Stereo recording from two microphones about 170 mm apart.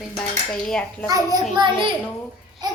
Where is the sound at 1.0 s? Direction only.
20° right (ahead or behind).